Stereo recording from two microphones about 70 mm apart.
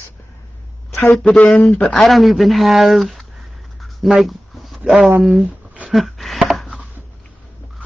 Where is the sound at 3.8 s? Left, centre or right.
Centre.